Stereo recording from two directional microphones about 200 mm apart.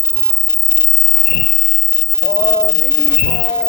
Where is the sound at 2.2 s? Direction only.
55° left (ahead or behind).